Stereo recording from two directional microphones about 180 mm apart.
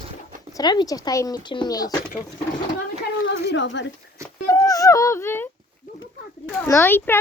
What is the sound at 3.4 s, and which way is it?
Speech, 90° left.